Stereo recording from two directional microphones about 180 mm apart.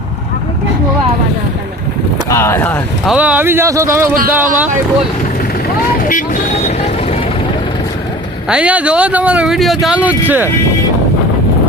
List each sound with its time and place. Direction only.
2.3 s speech: 15° left (ahead or behind)
3.1 s speech: 5° right (ahead or behind)
5.9 s speech: 50° left (ahead or behind)
8.4 s speech: 5° right (ahead or behind)